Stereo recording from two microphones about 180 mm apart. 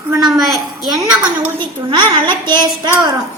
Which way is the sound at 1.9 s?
25° right (ahead or behind).